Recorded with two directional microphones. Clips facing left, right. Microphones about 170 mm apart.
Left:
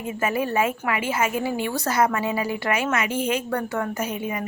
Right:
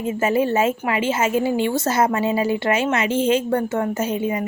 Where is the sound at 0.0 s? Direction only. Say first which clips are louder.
Right 5 dB; 25° right (ahead or behind).